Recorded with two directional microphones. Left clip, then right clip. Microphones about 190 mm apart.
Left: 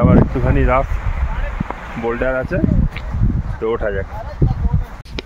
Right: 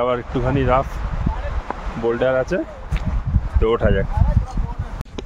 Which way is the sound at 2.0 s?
25° left (ahead or behind).